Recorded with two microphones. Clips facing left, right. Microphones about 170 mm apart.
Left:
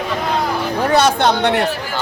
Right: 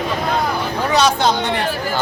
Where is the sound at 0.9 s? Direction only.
55° left (ahead or behind).